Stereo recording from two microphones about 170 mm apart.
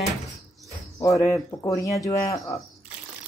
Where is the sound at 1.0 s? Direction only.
20° left (ahead or behind).